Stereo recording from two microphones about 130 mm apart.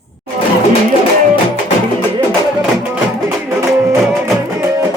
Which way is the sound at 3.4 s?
20° right (ahead or behind).